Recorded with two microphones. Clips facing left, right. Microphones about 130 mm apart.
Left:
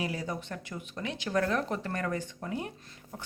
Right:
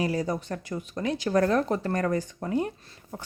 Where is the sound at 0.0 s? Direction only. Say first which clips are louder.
Right 7 dB; 40° right (ahead or behind).